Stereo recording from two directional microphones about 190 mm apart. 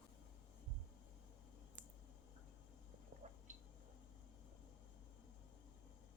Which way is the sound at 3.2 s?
40° right (ahead or behind).